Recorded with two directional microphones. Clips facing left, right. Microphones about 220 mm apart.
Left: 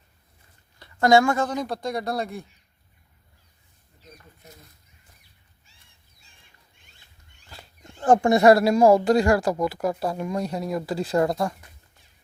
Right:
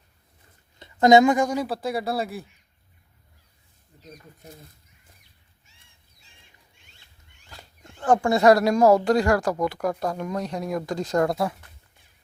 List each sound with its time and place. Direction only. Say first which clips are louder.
0.8 s speech: right 3 dB; 20° right (ahead or behind); by 2.5 s 5° right (ahead or behind)
4.4 s speech: right 5 dB; 30° right (ahead or behind)
7.5 s wild animals: left 1 dB; 15° left (ahead or behind)
8.4 s speech: left 1 dB; 10° left (ahead or behind)